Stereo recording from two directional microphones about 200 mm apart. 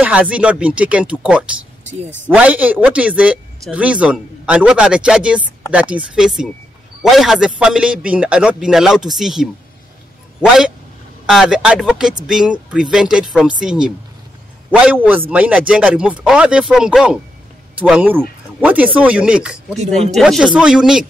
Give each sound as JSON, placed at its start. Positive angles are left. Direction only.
{"t": 0.0, "sound": "a man's voice", "side_deg": -5}
{"t": 19.8, "sound": "speech", "side_deg": -35}
{"t": 20.2, "sound": "a man's voice", "side_deg": 0}